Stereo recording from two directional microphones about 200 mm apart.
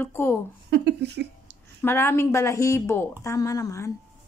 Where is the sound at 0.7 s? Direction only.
60° right (ahead or behind).